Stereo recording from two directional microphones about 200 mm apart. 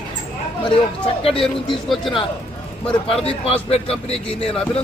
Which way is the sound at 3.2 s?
30° left (ahead or behind).